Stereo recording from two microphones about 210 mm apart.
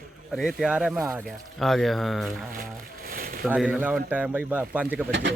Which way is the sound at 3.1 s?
40° right (ahead or behind).